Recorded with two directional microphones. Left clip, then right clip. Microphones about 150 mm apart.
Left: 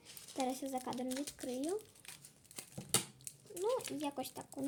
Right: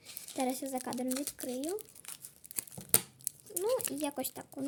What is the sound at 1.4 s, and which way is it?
Speech, 20° right (ahead or behind).